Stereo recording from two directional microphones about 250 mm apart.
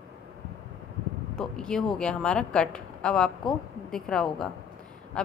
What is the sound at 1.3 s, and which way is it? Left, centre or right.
A woman's voice, centre.